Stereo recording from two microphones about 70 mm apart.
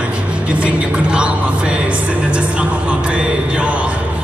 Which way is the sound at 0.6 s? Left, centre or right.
Centre.